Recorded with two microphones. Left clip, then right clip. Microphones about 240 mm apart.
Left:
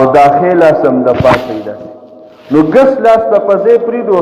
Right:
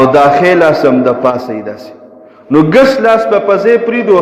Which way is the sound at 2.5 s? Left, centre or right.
Right.